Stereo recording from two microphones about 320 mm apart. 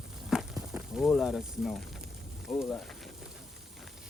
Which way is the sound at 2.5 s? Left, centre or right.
Centre.